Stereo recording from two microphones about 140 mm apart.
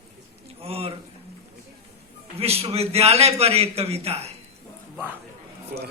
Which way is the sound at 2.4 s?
45° right (ahead or behind).